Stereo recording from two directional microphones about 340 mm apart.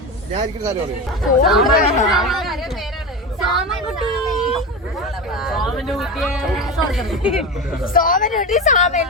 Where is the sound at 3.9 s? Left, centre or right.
Centre.